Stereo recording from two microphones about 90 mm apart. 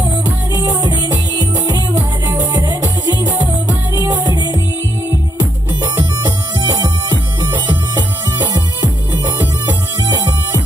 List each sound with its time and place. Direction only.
0.5 s music: 50° right (ahead or behind)
8.8 s music: 45° right (ahead or behind)